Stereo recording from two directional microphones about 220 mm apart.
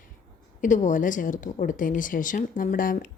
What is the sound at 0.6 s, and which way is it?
Speech, 35° left (ahead or behind).